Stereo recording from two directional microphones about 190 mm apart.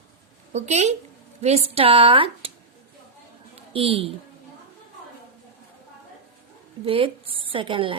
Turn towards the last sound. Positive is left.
turn(degrees=-25)  # may be behind; listen again after turning